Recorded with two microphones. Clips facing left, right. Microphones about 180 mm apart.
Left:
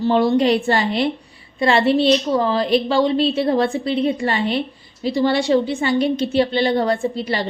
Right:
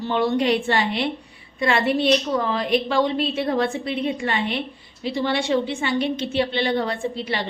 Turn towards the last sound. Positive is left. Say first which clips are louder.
# left 5 dB
turn(degrees=40)  # may be behind; listen again after turning